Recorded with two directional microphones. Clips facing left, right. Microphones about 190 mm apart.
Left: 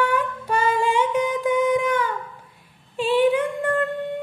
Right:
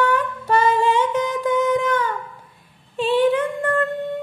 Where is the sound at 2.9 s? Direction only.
10° left (ahead or behind).